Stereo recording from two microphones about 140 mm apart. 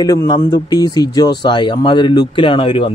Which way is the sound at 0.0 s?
25° left (ahead or behind).